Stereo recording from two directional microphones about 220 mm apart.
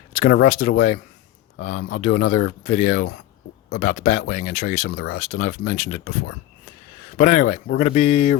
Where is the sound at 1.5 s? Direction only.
60° left (ahead or behind).